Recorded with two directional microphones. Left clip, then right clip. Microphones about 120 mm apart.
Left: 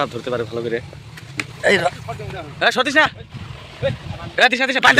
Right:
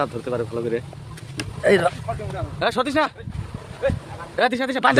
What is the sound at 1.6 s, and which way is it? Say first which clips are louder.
Speech: left 1 dB; 35° right (ahead or behind).